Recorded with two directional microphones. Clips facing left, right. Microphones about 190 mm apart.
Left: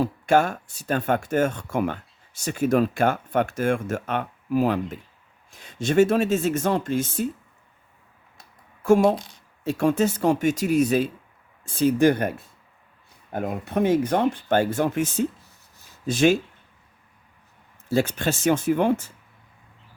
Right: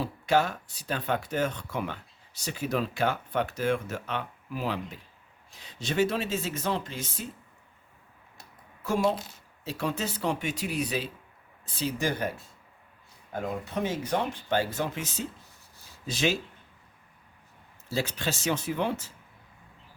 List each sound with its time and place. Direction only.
0.0 s speech: 50° left (ahead or behind)
8.8 s speech: 50° left (ahead or behind)
17.8 s speech: 50° left (ahead or behind)